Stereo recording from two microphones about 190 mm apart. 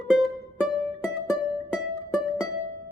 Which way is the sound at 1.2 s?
Centre (ahead or behind).